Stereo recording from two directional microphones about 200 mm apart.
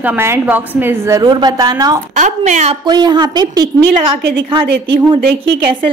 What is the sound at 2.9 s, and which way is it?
Speech, 20° right (ahead or behind).